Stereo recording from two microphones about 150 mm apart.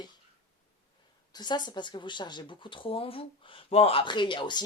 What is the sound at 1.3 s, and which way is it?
Speech, 30° left (ahead or behind).